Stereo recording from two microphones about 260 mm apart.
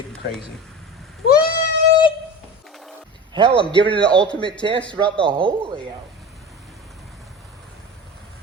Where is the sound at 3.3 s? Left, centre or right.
Centre.